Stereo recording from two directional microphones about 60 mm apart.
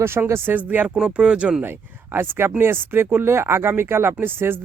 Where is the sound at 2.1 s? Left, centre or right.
Right.